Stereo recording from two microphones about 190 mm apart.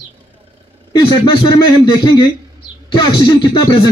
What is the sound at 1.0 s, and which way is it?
Speech, 25° left (ahead or behind).